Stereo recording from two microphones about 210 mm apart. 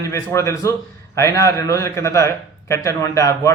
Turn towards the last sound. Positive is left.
turn(degrees=15)  # may be behind; listen again after turning